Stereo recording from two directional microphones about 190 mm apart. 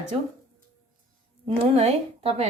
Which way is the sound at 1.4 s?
30° right (ahead or behind).